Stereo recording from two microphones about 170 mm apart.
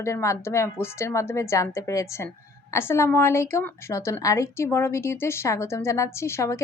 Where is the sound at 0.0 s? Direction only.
15° left (ahead or behind).